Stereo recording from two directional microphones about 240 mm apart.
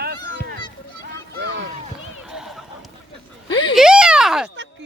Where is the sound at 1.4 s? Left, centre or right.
Right.